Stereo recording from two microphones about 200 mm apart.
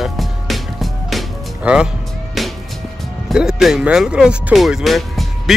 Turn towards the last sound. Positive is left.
turn(degrees=0)  # may be behind; listen again after turning